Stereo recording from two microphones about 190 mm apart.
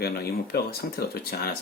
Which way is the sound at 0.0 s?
55° left (ahead or behind).